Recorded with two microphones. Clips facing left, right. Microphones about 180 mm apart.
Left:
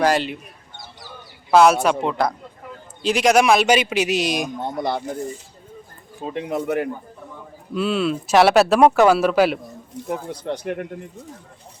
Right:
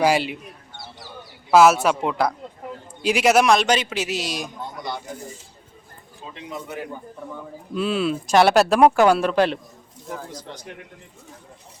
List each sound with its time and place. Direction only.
0.0 s speech: 10° right (ahead or behind)
1.5 s a man's voice: 5° right (ahead or behind); by 4.4 s 15° left (ahead or behind)
4.6 s speech: 60° left (ahead or behind)
6.2 s speech: 60° left (ahead or behind)
7.7 s speech: centre (ahead or behind)
10.1 s speech: 65° left (ahead or behind)